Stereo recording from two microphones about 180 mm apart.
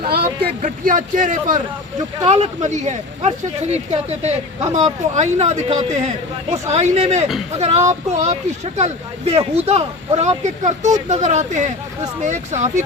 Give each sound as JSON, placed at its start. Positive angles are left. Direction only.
{"t": 0.6, "sound": "speech", "side_deg": -45}